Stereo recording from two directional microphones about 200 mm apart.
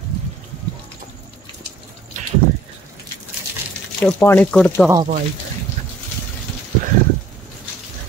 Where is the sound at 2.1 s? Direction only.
40° right (ahead or behind).